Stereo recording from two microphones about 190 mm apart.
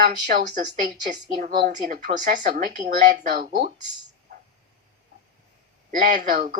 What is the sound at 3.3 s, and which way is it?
Speech, 55° right (ahead or behind).